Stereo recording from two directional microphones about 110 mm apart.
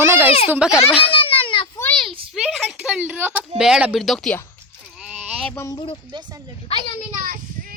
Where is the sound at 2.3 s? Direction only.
Centre (ahead or behind).